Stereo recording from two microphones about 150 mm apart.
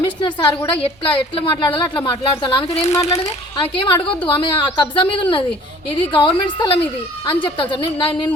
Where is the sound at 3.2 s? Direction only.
35° left (ahead or behind).